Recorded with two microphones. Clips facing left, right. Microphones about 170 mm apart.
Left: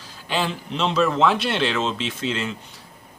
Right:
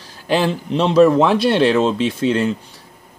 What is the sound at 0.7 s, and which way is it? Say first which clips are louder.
A man's voice: right 10 dB; 40° right (ahead or behind).